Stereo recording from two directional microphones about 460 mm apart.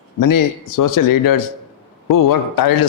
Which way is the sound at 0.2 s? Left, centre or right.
Left.